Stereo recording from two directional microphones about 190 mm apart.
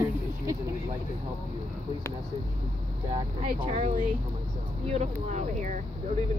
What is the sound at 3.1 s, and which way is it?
Speech, 30° right (ahead or behind).